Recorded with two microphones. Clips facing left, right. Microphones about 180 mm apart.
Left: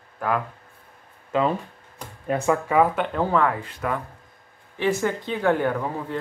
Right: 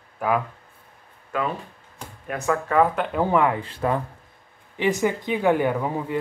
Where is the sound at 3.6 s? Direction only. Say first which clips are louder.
Right 4 dB; 30° right (ahead or behind).